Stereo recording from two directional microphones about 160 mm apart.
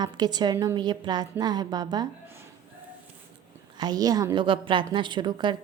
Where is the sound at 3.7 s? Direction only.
25° right (ahead or behind).